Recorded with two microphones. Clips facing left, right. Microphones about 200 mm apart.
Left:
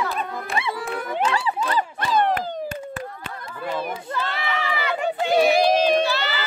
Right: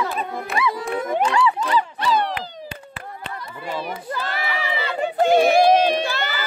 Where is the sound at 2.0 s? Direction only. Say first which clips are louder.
Left 1 dB; 45° left (ahead or behind).